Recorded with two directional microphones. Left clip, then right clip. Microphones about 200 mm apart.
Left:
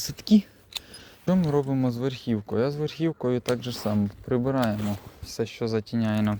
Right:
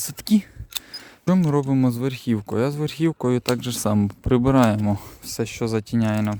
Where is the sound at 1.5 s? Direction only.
60° right (ahead or behind).